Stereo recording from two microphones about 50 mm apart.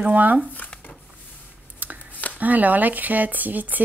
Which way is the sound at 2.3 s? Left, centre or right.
Right.